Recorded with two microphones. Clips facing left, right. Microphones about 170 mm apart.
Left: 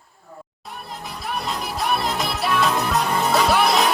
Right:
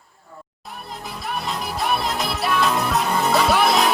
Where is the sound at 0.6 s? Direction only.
Centre (ahead or behind).